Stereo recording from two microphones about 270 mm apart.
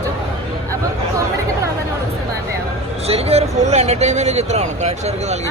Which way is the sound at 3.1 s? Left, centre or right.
Right.